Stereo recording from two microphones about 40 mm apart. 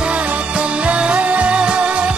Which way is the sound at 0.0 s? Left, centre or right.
Right.